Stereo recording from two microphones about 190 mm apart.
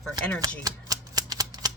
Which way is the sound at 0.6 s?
20° right (ahead or behind).